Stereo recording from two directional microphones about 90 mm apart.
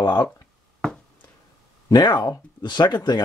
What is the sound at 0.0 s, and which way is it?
Speech, 50° left (ahead or behind).